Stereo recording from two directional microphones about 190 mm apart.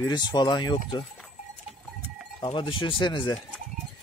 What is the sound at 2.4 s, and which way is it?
Speech, 25° left (ahead or behind).